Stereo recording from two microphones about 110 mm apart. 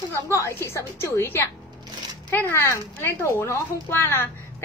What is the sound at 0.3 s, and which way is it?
A woman's voice, 25° left (ahead or behind).